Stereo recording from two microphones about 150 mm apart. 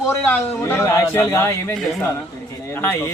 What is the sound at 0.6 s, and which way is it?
Speech, 20° left (ahead or behind).